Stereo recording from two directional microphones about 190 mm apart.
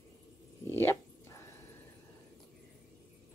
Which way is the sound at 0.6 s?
15° left (ahead or behind).